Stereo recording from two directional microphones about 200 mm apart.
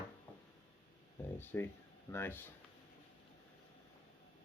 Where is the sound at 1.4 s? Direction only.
10° left (ahead or behind).